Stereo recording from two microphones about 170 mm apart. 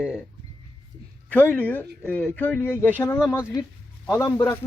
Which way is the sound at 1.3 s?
10° left (ahead or behind).